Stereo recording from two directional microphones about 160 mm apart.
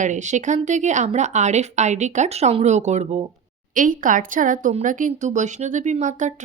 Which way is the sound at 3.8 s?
55° right (ahead or behind).